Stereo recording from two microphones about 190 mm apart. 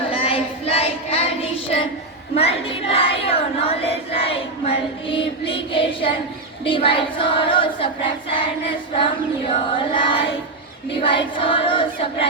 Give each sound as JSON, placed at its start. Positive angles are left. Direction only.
{"t": 0.1, "sound": "child singing", "side_deg": 30}
{"t": 6.7, "sound": "choir", "side_deg": 30}